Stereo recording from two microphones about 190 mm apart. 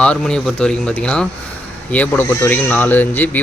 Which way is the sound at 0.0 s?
5° left (ahead or behind).